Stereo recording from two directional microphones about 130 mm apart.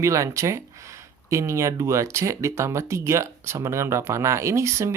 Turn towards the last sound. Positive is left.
turn(degrees=-20)  # may be behind; listen again after turning